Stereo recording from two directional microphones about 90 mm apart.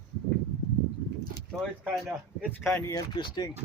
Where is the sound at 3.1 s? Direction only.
60° left (ahead or behind).